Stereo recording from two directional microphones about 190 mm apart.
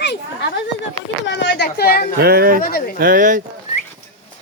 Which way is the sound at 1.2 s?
65° left (ahead or behind).